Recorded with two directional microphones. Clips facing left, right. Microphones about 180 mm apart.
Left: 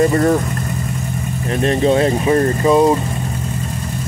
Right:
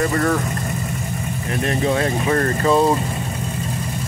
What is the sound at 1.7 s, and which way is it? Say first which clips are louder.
Speech: left 6 dB; 25° left (ahead or behind).